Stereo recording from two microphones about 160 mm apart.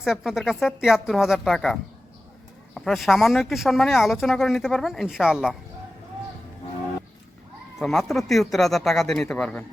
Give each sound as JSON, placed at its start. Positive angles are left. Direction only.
{"t": 0.0, "sound": "speech", "side_deg": -5}
{"t": 7.8, "sound": "speech", "side_deg": 0}